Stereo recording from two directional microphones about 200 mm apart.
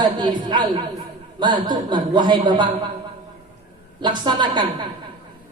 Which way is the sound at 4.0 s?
20° right (ahead or behind).